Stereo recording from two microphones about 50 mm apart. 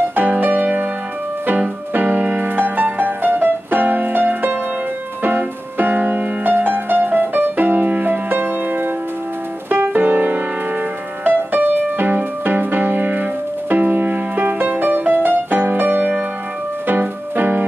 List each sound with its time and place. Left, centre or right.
0.1 s music: right
2.0 s music: right